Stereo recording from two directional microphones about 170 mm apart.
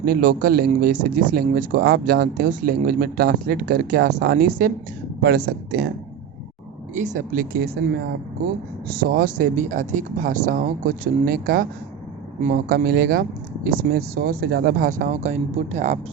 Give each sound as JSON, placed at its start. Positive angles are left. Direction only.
{"t": 0.0, "sound": "speech", "side_deg": -60}
{"t": 2.5, "sound": "speech", "side_deg": -55}
{"t": 6.9, "sound": "speech", "side_deg": -45}
{"t": 8.9, "sound": "speech", "side_deg": -65}